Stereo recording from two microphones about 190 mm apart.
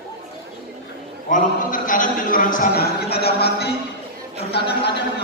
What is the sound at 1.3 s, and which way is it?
A man's voice, 45° left (ahead or behind).